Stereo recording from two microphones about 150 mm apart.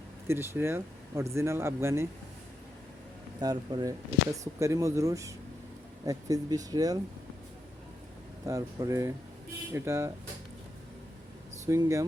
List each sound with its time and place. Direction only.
0.3 s speech: 15° right (ahead or behind)
3.4 s speech: 30° right (ahead or behind)
8.4 s speech: 20° right (ahead or behind)
11.6 s speech: 20° right (ahead or behind)